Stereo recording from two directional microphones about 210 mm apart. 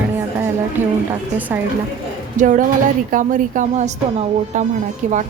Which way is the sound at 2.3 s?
40° right (ahead or behind).